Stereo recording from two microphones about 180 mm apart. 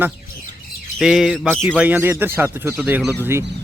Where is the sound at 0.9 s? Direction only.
Centre (ahead or behind).